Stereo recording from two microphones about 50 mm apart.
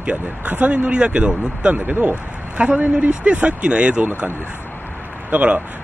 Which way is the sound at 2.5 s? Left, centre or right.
Right.